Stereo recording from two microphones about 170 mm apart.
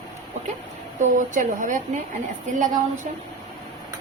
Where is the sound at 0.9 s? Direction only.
50° right (ahead or behind).